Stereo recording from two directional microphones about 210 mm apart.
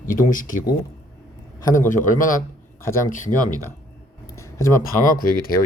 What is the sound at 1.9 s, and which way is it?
Speech, 40° left (ahead or behind).